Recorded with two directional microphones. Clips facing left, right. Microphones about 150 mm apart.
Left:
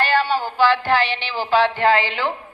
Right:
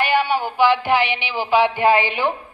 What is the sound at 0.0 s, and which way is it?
A woman's voice, 15° right (ahead or behind).